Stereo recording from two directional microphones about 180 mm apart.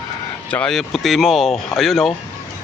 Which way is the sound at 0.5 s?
5° left (ahead or behind).